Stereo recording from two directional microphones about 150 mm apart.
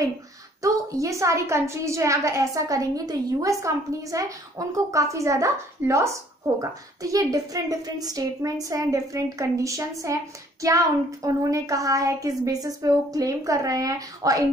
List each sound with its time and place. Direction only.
0.6 s a woman's voice: 20° right (ahead or behind)